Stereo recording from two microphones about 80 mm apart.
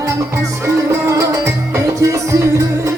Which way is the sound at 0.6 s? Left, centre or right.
Right.